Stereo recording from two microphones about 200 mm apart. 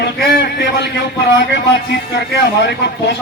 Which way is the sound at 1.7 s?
60° left (ahead or behind).